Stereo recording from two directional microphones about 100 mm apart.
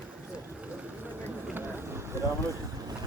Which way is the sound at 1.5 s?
20° right (ahead or behind).